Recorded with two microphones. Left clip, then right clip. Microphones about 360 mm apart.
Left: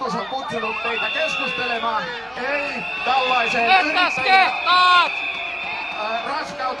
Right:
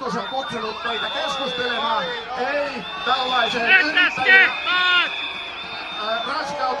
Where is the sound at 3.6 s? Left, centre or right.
Centre.